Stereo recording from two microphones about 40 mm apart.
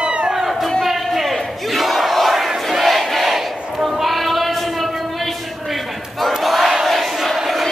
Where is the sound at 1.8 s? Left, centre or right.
Centre.